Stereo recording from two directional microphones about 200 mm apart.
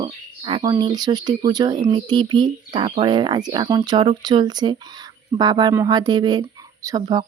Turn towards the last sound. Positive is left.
turn(degrees=-20)  # may be behind; listen again after turning